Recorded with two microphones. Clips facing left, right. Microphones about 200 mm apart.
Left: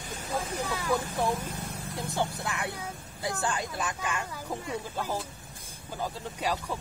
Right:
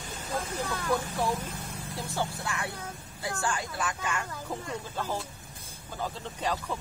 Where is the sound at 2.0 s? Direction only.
15° left (ahead or behind).